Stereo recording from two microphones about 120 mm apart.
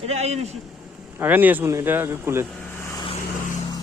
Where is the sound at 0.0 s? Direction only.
65° right (ahead or behind).